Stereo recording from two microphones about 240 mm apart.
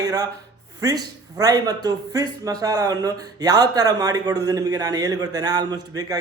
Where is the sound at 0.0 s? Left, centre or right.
Centre.